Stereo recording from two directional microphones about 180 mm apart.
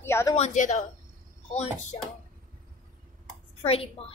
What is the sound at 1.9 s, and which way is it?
Speech, 35° left (ahead or behind).